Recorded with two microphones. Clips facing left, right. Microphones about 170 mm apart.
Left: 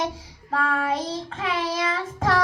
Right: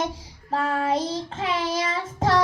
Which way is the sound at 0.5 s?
25° right (ahead or behind).